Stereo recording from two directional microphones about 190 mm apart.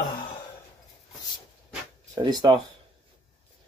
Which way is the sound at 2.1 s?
20° right (ahead or behind).